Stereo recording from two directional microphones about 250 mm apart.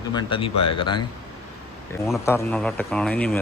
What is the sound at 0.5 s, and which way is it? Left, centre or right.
Speech, left.